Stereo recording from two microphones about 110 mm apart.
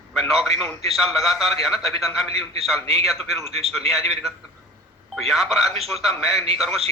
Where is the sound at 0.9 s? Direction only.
Centre (ahead or behind).